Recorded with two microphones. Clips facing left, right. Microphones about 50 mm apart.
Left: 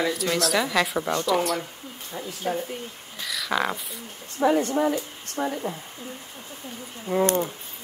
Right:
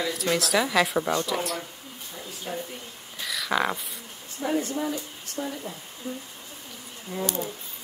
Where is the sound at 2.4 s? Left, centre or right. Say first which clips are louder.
Left 7 dB; left.